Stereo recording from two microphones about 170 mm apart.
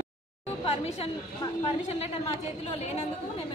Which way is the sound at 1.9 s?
35° left (ahead or behind).